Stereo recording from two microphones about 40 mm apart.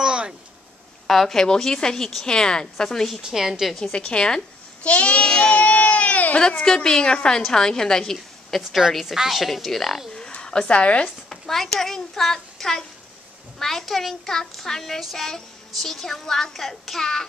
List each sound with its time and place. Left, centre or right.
0.0 s a sound: right
1.0 s a woman's voice: centre
3.2 s a woman's voice: centre
3.9 s a woman's voice: left
5.2 s music: centre; by 6.4 s left
6.4 s a woman's voice: centre
8.9 s a woman's voice: centre
10.4 s a sound: centre
10.7 s speech: left
11.2 s a child's voice: centre